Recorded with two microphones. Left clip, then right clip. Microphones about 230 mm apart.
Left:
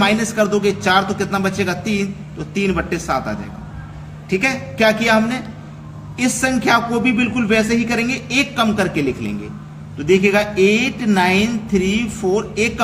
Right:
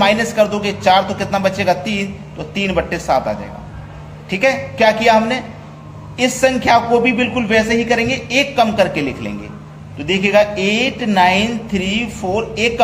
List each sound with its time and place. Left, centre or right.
0.0 s a woman's voice: centre
6.4 s speech: centre